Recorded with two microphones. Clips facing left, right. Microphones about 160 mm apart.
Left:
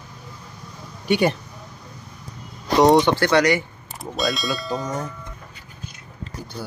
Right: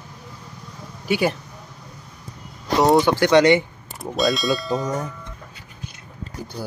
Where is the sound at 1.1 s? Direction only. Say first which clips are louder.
Left 2 dB; 5° right (ahead or behind).